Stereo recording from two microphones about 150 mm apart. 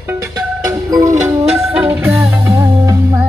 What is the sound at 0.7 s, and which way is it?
Music, 20° right (ahead or behind).